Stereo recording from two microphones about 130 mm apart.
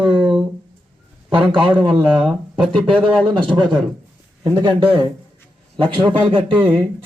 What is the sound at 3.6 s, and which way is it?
Speech, 35° right (ahead or behind).